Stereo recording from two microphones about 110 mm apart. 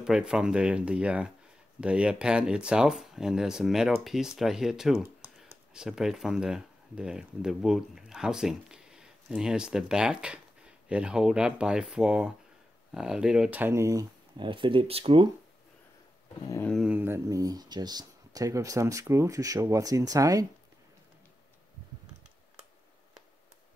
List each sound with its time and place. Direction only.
0.0 s speech: 5° right (ahead or behind); by 14.0 s 30° right (ahead or behind)
14.3 s speech: 50° right (ahead or behind)
16.9 s speech: 20° right (ahead or behind)
17.3 s speech: 35° right (ahead or behind)